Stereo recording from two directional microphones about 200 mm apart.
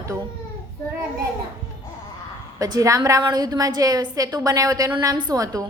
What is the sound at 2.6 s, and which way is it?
A woman's voice, 15° right (ahead or behind).